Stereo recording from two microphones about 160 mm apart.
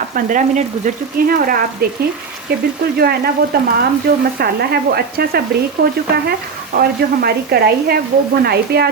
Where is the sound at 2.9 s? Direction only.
75° right (ahead or behind).